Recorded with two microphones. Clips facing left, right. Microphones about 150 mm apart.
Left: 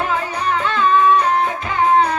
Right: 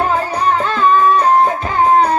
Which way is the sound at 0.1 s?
40° right (ahead or behind).